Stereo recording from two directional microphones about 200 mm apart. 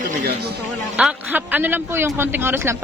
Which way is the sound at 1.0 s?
5° right (ahead or behind).